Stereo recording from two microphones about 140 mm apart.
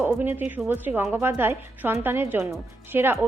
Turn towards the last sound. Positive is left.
turn(degrees=-15)  # may be behind; listen again after turning